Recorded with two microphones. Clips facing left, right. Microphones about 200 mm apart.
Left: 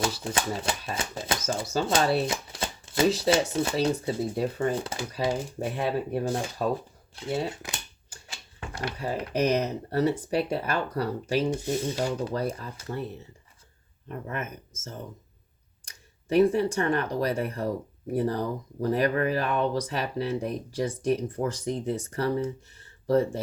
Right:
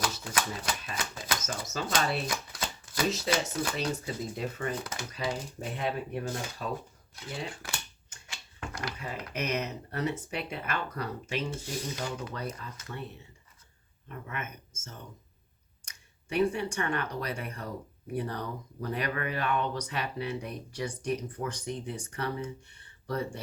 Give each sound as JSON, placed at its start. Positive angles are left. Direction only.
{"t": 0.0, "sound": "speech", "side_deg": 30}
{"t": 7.5, "sound": "speech", "side_deg": 20}
{"t": 8.1, "sound": "speech", "side_deg": 30}
{"t": 14.1, "sound": "speech", "side_deg": 35}
{"t": 15.9, "sound": "speech", "side_deg": 35}
{"t": 22.7, "sound": "a sound", "side_deg": 35}